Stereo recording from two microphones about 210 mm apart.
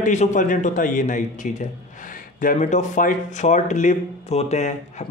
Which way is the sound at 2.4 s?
40° left (ahead or behind).